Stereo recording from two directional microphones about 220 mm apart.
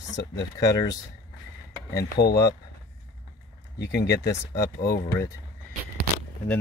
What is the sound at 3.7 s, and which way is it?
Speech, 50° left (ahead or behind).